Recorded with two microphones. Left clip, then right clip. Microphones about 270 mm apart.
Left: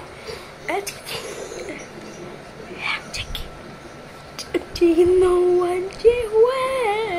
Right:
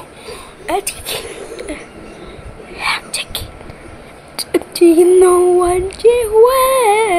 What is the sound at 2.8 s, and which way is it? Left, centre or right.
Whispering, right.